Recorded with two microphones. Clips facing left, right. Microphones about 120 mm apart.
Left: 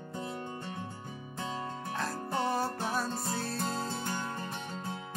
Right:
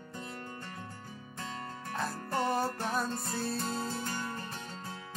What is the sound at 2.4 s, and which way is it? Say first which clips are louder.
Music: right 1 dB; centre (ahead or behind).